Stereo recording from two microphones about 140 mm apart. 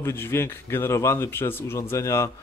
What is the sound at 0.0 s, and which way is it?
A man's voice, 15° left (ahead or behind).